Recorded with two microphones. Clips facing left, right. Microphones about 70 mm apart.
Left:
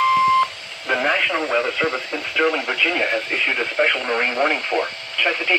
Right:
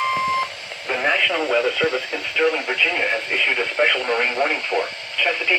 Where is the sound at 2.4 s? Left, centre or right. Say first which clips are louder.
Even; left.